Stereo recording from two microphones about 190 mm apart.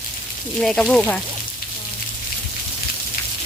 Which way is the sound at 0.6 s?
5° left (ahead or behind).